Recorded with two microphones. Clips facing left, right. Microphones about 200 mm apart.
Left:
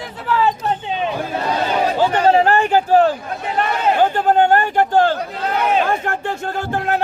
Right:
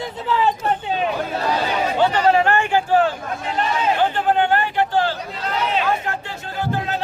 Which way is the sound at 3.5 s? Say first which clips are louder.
Left 3 dB; 60° left (ahead or behind).